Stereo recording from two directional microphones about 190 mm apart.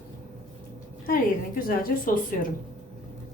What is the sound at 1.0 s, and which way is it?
Speech, 50° left (ahead or behind).